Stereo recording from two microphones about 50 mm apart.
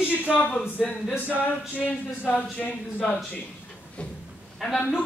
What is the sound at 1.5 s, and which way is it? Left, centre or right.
Speech, left.